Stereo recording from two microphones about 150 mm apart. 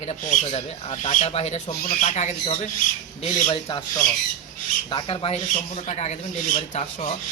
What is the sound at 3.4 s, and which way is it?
Speech, 30° left (ahead or behind).